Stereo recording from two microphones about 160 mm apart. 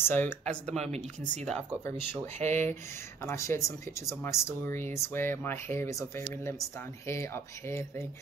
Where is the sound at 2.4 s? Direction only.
15° left (ahead or behind).